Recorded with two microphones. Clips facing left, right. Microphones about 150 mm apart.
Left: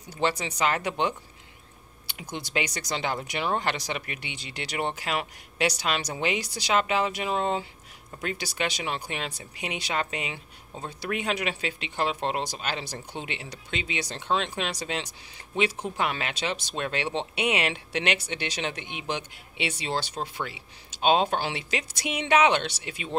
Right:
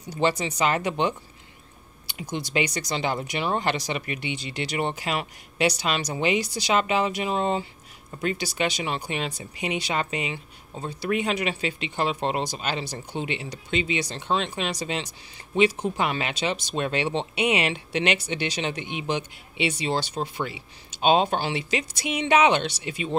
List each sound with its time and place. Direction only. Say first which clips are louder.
0.2 s speech: right 3 dB; 5° right (ahead or behind)
2.5 s speech: right 3 dB; centre (ahead or behind)
15.5 s speech: right 5 dB; centre (ahead or behind)